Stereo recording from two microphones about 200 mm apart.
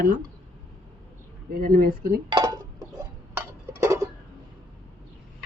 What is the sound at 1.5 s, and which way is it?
Speech, 45° right (ahead or behind).